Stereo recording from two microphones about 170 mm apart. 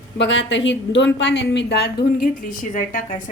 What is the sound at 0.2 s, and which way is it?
A woman's voice, 90° left.